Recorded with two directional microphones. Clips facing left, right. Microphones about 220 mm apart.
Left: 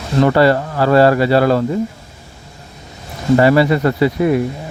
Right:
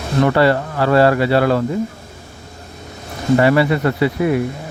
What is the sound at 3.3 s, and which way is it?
Speech, 35° left (ahead or behind).